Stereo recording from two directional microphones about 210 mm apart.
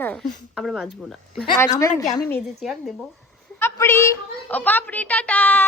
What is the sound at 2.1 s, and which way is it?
Speech, 20° left (ahead or behind).